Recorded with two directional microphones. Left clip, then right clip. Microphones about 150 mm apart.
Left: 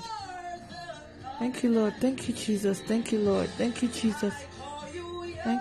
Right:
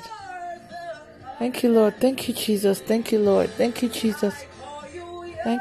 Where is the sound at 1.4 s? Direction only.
45° right (ahead or behind).